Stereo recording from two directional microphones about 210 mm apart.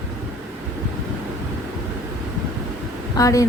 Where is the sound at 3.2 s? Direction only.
15° left (ahead or behind).